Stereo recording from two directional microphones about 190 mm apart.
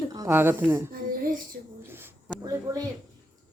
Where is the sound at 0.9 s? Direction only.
45° right (ahead or behind).